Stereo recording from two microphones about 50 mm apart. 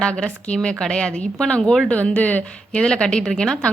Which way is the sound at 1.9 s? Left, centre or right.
Left.